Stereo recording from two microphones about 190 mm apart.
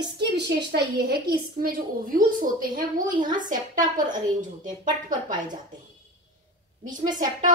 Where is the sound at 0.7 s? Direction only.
55° right (ahead or behind).